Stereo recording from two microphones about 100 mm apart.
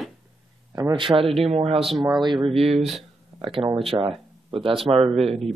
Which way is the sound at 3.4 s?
65° right (ahead or behind).